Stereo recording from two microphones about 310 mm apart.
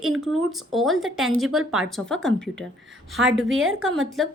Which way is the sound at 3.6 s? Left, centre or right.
Right.